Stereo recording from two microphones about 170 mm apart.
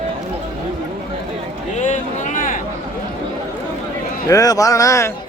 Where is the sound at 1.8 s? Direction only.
45° left (ahead or behind).